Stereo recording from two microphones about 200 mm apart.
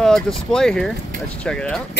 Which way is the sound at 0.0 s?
Centre (ahead or behind).